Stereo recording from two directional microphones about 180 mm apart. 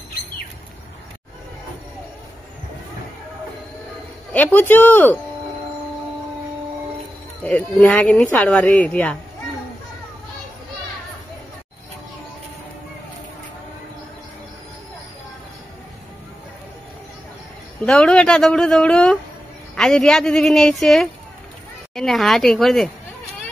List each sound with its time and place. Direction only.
4.3 s speech: 10° left (ahead or behind)
7.4 s speech: 5° left (ahead or behind)
17.8 s speech: 5° left (ahead or behind)